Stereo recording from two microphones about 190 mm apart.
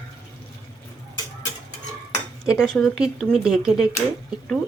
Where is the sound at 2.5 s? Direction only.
Centre (ahead or behind).